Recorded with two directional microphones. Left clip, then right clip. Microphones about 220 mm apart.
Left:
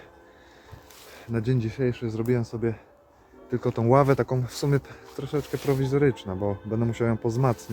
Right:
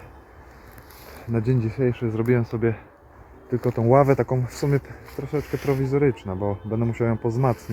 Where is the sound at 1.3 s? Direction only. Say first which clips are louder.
Right 3 dB; 20° right (ahead or behind).